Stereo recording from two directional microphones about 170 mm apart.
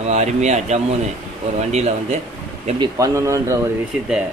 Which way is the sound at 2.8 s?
20° right (ahead or behind).